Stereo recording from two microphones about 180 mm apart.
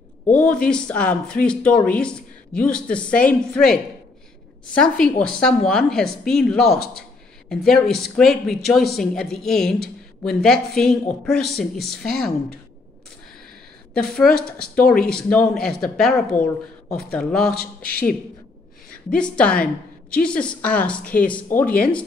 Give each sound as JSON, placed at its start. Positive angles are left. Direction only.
{"t": 0.3, "sound": "speech", "side_deg": 5}
{"t": 13.9, "sound": "speech", "side_deg": 5}
{"t": 19.1, "sound": "speech", "side_deg": 5}
{"t": 21.0, "sound": "speech", "side_deg": 50}